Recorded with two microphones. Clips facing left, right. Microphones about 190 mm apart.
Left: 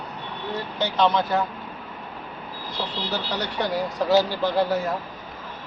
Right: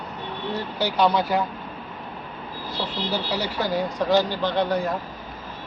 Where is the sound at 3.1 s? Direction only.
10° right (ahead or behind).